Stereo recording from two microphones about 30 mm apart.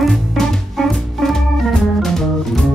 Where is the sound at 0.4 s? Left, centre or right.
Centre.